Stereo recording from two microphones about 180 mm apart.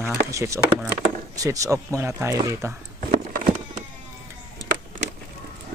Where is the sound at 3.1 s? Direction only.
50° right (ahead or behind).